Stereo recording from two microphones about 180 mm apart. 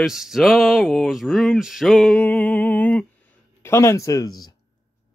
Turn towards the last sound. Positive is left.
turn(degrees=20)  # may be behind; listen again after turning